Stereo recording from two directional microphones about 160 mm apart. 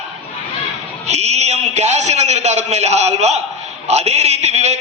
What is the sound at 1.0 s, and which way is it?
A man's voice, 45° right (ahead or behind).